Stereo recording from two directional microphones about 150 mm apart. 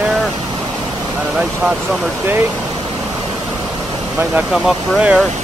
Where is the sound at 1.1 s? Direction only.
10° right (ahead or behind).